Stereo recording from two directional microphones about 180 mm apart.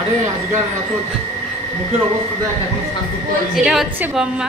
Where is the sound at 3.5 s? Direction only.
Centre (ahead or behind).